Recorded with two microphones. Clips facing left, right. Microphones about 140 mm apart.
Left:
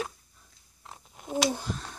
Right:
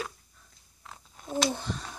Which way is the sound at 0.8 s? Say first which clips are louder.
Left 1 dB; 15° left (ahead or behind).